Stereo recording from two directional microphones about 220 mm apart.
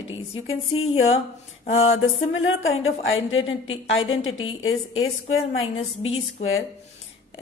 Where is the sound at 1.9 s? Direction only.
65° left (ahead or behind).